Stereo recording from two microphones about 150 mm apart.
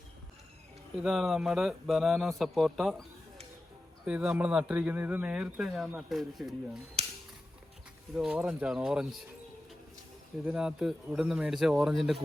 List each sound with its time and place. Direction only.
0.9 s speech: centre (ahead or behind)
7.0 s a sound: 45° right (ahead or behind)
8.1 s speech: 5° right (ahead or behind)
10.4 s speech: 5° right (ahead or behind)